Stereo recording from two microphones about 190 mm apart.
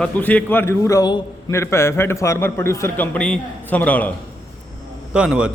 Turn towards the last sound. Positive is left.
turn(degrees=-5)  # may be behind; listen again after turning